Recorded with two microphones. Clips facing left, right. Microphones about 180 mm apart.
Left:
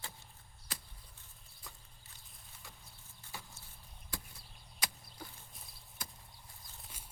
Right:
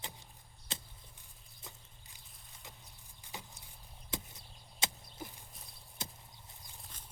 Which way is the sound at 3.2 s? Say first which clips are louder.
Right 2 dB; 15° right (ahead or behind).